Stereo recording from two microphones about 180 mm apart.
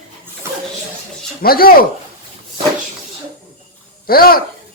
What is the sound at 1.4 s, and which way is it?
Speech, 55° left (ahead or behind).